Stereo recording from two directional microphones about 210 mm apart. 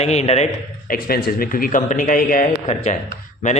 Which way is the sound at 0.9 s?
45° left (ahead or behind).